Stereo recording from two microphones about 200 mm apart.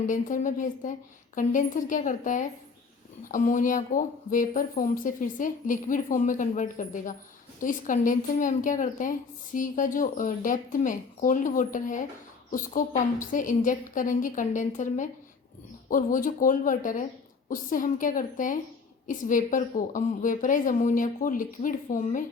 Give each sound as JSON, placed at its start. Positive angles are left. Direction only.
{"t": 0.0, "sound": "a woman's voice", "side_deg": 40}